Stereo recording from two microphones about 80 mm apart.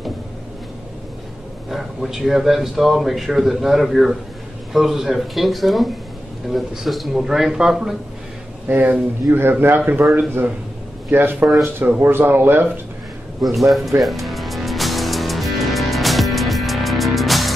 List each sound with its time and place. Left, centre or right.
1.7 s speech: centre
8.6 s a man's voice: right
11.1 s a man's voice: right
13.4 s speech: centre
14.0 s music: centre